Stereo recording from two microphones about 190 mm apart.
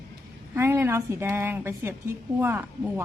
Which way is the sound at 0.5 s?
15° right (ahead or behind).